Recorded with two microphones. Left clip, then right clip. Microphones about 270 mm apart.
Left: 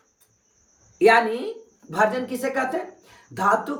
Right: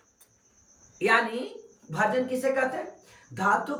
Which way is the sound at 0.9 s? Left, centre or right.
Centre.